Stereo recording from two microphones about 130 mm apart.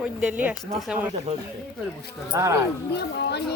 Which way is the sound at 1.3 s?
55° right (ahead or behind).